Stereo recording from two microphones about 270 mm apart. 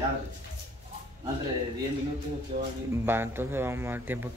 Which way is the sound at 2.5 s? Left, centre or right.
Right.